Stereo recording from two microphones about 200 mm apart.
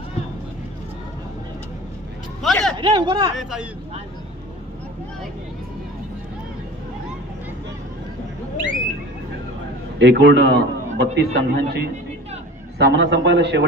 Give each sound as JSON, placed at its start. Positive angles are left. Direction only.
{"t": 2.4, "sound": "a sound", "side_deg": 0}
{"t": 2.8, "sound": "speech", "side_deg": -25}
{"t": 3.3, "sound": "speech", "side_deg": -5}
{"t": 9.9, "sound": "a man's voice", "side_deg": -60}